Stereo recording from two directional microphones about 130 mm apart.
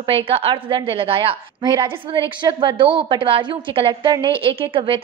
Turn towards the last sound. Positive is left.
turn(degrees=-45)  # may be behind; listen again after turning